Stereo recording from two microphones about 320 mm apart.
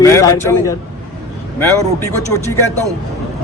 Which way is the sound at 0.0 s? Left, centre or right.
Centre.